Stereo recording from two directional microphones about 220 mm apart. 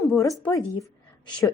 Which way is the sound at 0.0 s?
15° left (ahead or behind).